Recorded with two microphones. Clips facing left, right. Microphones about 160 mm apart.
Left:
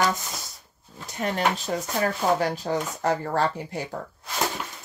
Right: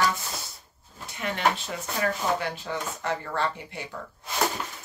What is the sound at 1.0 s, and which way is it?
Speech, 40° left (ahead or behind).